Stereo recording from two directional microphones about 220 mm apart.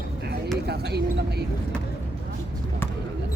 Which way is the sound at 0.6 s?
45° right (ahead or behind).